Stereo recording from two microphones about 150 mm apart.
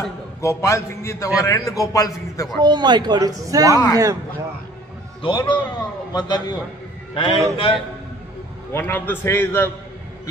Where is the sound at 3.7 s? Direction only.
25° left (ahead or behind).